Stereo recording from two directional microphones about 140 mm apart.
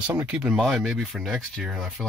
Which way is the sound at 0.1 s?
10° right (ahead or behind).